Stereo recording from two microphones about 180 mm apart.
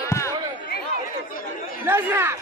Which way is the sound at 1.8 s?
15° right (ahead or behind).